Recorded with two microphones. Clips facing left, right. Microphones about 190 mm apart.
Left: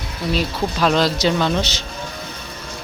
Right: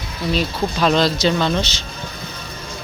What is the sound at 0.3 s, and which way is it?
Speech, 5° left (ahead or behind).